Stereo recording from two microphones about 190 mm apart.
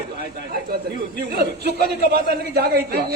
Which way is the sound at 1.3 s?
55° right (ahead or behind).